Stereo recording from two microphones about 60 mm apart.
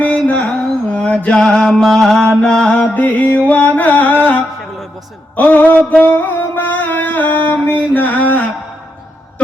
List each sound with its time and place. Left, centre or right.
0.0 s music: left
0.9 s mantra: left; by 2.2 s centre
2.4 s music: centre
5.4 s a sound: left